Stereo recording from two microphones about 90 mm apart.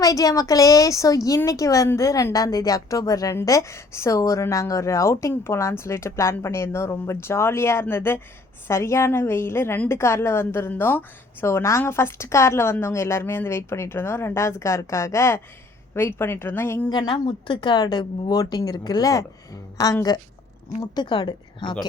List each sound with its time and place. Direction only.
0.0 s a woman's voice: 40° left (ahead or behind)
16.9 s a woman's voice: 55° left (ahead or behind)
20.9 s a woman's voice: 60° left (ahead or behind)